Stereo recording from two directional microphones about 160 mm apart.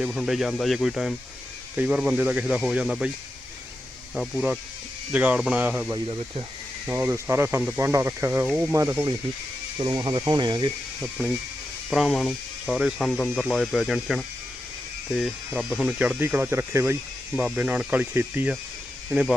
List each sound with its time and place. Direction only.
0.0 s speech: centre (ahead or behind)
4.1 s speech: 5° right (ahead or behind)
5.9 s speech: 25° right (ahead or behind)
6.8 s speech: 15° right (ahead or behind)
11.0 s speech: 5° right (ahead or behind)